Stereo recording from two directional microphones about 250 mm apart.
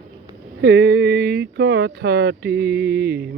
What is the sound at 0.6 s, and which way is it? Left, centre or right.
Speech, right.